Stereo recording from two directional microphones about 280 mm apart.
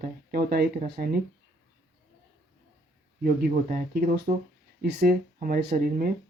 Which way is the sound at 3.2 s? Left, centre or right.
Right.